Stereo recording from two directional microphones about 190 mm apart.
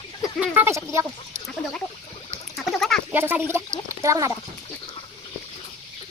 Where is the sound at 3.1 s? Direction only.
10° right (ahead or behind).